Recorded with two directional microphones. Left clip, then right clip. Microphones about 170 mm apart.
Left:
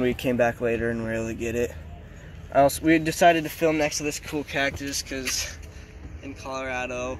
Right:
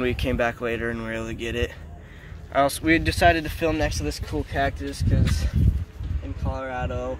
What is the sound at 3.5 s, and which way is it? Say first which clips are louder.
Speech: left 2 dB; 10° left (ahead or behind).